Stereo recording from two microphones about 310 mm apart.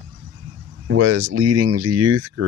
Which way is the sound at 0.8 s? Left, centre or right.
Right.